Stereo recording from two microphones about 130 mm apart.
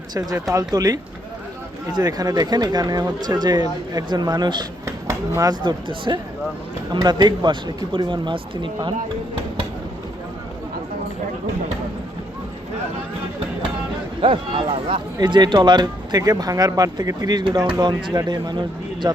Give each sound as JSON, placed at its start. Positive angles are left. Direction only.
{"t": 0.1, "sound": "speech", "side_deg": -30}
{"t": 4.9, "sound": "speech", "side_deg": -25}
{"t": 14.2, "sound": "speech", "side_deg": -40}